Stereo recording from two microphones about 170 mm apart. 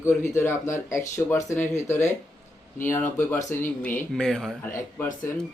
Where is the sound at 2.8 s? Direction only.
15° left (ahead or behind).